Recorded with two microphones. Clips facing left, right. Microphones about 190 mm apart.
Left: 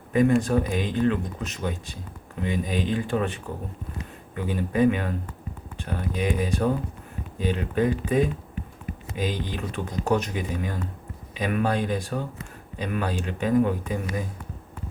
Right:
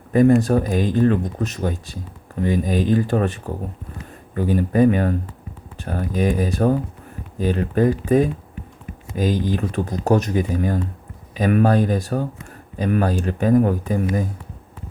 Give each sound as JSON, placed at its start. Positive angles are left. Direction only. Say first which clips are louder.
{"t": 0.1, "sound": "speech", "louder": "right 6 dB", "side_deg": -40}